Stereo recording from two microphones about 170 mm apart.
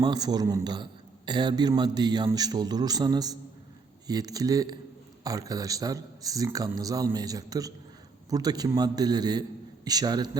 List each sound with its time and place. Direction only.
0.0 s a man's voice: 25° right (ahead or behind)